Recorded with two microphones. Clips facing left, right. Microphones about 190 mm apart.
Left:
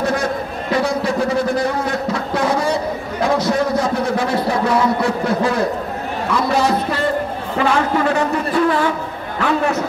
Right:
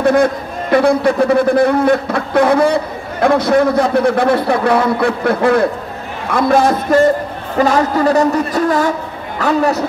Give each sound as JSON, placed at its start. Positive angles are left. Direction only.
{"t": 0.0, "sound": "a man's voice", "side_deg": -55}